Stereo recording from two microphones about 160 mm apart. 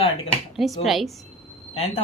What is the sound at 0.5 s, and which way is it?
Speech, centre (ahead or behind).